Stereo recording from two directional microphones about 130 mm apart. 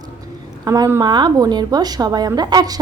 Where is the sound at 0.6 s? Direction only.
30° right (ahead or behind).